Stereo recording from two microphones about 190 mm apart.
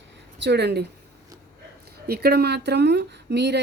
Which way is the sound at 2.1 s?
55° right (ahead or behind).